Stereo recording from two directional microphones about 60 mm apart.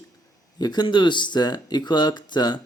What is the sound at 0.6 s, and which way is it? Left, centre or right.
Speech, left.